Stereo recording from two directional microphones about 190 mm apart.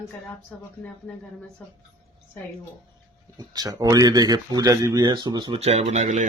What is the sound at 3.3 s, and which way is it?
Speech, 20° right (ahead or behind).